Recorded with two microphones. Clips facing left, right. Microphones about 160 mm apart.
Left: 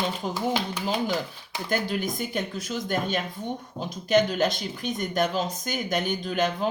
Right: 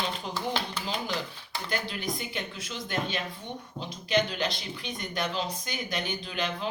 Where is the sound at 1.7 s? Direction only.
45° left (ahead or behind).